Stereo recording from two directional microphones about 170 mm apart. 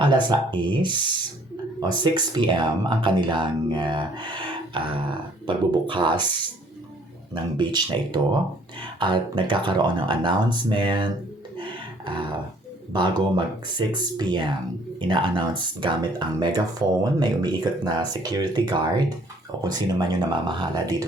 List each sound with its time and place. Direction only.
0.0 s speech: 25° right (ahead or behind)
7.3 s speech: 25° right (ahead or behind)
11.5 s a sound: 30° right (ahead or behind)
12.9 s speech: 25° right (ahead or behind)